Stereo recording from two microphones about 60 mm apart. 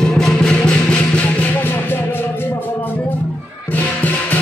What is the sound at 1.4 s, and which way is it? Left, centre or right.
Music, left.